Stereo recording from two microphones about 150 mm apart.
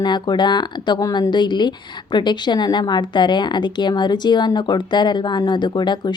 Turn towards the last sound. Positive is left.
turn(degrees=30)  # may be behind; listen again after turning